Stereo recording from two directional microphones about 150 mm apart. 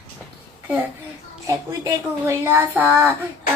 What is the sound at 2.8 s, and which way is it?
Child singing, 10° right (ahead or behind).